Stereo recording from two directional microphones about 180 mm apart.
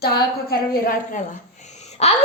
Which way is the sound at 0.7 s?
55° left (ahead or behind).